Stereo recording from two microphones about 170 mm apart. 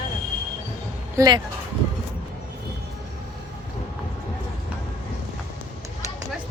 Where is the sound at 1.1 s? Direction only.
20° right (ahead or behind).